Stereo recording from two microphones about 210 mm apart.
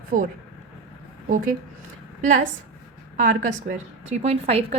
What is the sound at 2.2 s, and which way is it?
A woman's voice, 35° right (ahead or behind).